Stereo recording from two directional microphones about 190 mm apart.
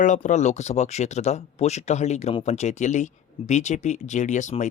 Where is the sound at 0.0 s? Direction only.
40° left (ahead or behind).